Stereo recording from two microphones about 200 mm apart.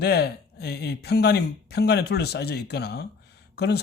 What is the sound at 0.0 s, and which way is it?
Speech, 55° left (ahead or behind).